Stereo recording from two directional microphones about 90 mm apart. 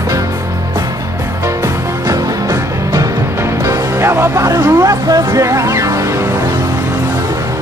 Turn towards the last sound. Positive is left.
turn(degrees=-35)  # may be behind; listen again after turning